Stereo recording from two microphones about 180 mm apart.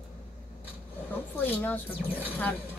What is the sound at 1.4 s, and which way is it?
Speech, 10° left (ahead or behind).